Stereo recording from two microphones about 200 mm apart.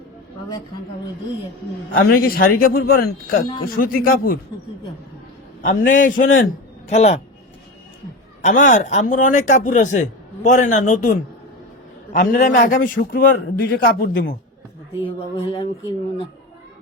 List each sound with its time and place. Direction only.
1.9 s a man's voice: 50° left (ahead or behind)
5.6 s speech: 40° left (ahead or behind)
8.4 s a man's voice: 40° left (ahead or behind)
15.0 s speech: 30° left (ahead or behind)